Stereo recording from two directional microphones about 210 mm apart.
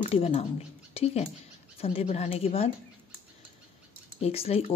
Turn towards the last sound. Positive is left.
turn(degrees=30)  # may be behind; listen again after turning